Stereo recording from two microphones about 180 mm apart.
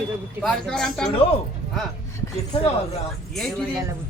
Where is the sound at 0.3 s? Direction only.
Centre (ahead or behind).